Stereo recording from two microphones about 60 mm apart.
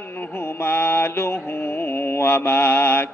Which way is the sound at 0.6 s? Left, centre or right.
Left.